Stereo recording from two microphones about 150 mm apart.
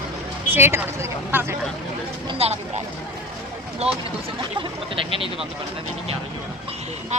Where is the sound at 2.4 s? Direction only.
40° right (ahead or behind).